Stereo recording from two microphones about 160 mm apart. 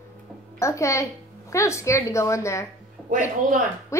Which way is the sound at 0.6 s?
20° left (ahead or behind).